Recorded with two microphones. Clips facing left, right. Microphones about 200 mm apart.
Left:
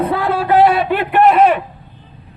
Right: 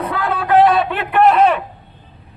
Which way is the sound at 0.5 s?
10° left (ahead or behind).